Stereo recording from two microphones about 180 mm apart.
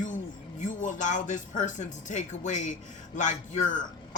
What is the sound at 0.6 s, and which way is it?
A man's voice, 45° left (ahead or behind).